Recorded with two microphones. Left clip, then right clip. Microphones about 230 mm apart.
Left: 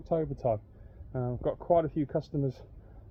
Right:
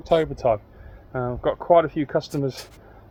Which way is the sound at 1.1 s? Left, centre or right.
Right.